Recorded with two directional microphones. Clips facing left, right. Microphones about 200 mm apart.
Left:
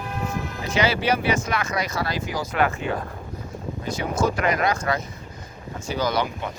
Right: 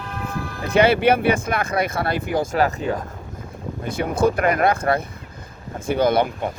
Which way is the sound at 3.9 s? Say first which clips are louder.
Right 4 dB; 55° right (ahead or behind).